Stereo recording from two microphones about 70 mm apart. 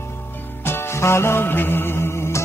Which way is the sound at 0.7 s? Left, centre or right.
Left.